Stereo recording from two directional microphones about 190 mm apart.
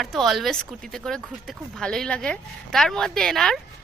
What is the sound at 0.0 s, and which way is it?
A woman's voice, centre (ahead or behind).